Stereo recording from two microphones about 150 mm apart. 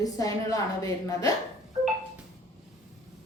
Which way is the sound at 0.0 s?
25° left (ahead or behind).